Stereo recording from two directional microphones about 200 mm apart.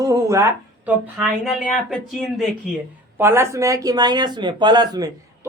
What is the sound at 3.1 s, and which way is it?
A woman's voice, 10° right (ahead or behind).